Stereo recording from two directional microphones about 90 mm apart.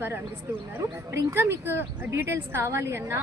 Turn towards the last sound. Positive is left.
turn(degrees=-30)  # may be behind; listen again after turning